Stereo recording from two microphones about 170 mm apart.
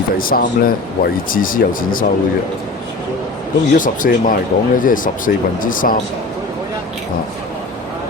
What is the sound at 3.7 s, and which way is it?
Speech, 50° left (ahead or behind).